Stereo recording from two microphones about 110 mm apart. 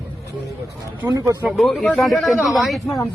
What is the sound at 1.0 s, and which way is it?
Speech, 20° right (ahead or behind).